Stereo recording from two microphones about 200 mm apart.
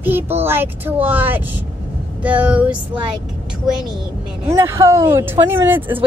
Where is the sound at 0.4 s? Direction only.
10° right (ahead or behind).